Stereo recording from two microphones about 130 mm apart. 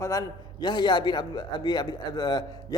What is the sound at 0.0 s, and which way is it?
A man's voice, 25° left (ahead or behind).